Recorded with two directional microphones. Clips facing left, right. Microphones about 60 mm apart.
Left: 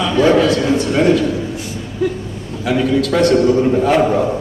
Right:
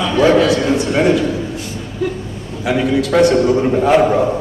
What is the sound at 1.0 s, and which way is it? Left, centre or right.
Speech, right.